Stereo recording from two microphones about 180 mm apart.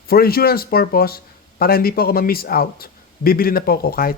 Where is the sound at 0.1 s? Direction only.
55° left (ahead or behind).